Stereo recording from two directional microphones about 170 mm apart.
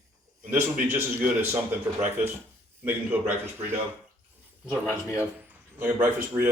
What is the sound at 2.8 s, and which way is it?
Speech, 10° right (ahead or behind).